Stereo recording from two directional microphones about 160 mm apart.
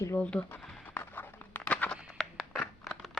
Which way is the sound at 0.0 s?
10° left (ahead or behind).